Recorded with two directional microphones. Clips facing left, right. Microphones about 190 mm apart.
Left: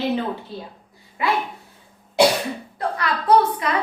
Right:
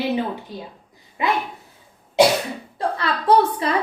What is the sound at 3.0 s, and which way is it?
Speech, 30° right (ahead or behind).